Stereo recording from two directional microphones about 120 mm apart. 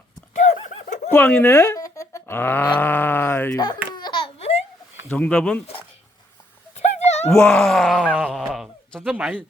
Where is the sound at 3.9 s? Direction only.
40° left (ahead or behind).